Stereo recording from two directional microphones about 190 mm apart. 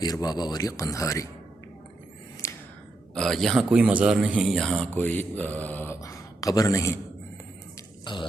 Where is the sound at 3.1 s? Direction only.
Centre (ahead or behind).